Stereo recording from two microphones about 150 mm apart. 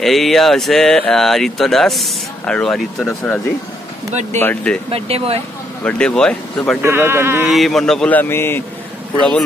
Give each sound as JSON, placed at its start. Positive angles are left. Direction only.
{"t": 0.0, "sound": "speech", "side_deg": 0}
{"t": 4.1, "sound": "speech", "side_deg": -50}
{"t": 4.4, "sound": "speech", "side_deg": 15}
{"t": 4.9, "sound": "speech", "side_deg": -40}
{"t": 5.9, "sound": "speech", "side_deg": 5}
{"t": 6.8, "sound": "speech", "side_deg": -15}
{"t": 7.4, "sound": "speech", "side_deg": 0}